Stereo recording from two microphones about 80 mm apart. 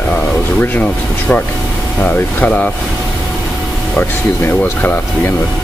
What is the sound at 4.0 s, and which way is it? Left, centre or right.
Speech, left.